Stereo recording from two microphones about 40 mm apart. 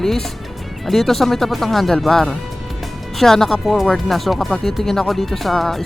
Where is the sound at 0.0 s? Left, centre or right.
Centre.